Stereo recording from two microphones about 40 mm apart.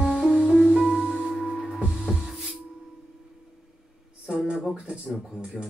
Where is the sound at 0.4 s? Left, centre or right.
Centre.